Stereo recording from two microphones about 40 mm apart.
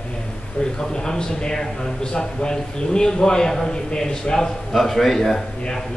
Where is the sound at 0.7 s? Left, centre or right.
Centre.